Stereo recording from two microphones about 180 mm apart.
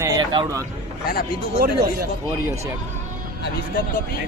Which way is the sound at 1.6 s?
60° right (ahead or behind).